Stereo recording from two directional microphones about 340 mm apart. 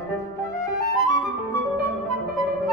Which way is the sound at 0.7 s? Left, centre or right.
Centre.